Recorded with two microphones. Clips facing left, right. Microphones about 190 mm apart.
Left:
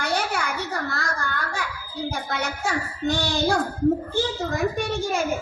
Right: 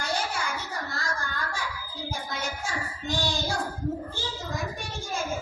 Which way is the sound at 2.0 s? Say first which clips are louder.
Left 5 dB; 70° left (ahead or behind).